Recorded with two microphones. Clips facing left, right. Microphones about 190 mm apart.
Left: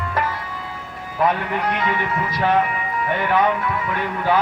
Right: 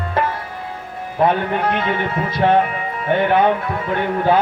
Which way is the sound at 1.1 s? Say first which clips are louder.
Right 3 dB; 30° right (ahead or behind).